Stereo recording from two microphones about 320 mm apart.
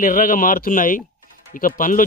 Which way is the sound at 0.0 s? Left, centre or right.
Left.